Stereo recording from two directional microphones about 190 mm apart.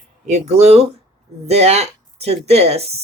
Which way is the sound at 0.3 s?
35° right (ahead or behind).